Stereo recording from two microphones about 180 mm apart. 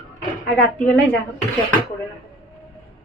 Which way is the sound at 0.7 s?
10° left (ahead or behind).